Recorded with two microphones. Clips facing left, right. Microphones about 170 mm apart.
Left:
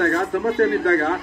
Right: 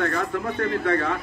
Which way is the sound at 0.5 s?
70° left (ahead or behind).